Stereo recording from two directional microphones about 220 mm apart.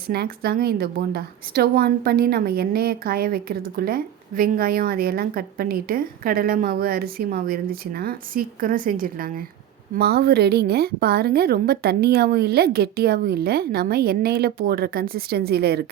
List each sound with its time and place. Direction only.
0.1 s a woman's voice: 45° right (ahead or behind)